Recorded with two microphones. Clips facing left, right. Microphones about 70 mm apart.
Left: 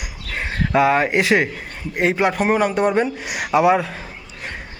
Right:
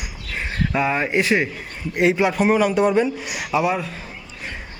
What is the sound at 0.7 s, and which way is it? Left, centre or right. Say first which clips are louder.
Speech: left 5 dB; left.